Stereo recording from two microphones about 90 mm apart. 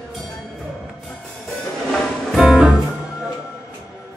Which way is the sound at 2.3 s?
Centre (ahead or behind).